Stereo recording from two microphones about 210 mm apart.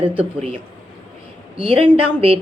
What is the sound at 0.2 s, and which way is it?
A woman's voice, 25° right (ahead or behind).